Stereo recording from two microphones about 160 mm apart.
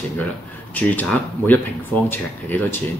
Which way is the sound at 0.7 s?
10° left (ahead or behind).